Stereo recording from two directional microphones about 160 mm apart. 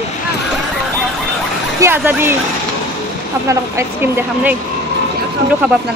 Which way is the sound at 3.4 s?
15° right (ahead or behind).